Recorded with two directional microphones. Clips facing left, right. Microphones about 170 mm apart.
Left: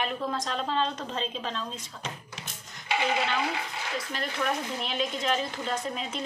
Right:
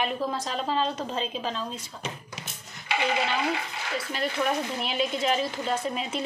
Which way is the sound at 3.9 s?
5° right (ahead or behind).